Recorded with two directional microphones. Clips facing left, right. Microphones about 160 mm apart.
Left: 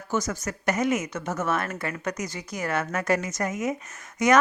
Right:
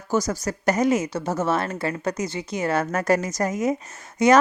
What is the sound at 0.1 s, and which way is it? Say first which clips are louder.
A woman's voice: right 5 dB; 35° right (ahead or behind).